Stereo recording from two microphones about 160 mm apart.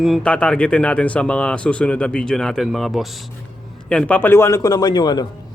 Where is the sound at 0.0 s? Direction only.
5° left (ahead or behind); by 5.2 s 25° left (ahead or behind).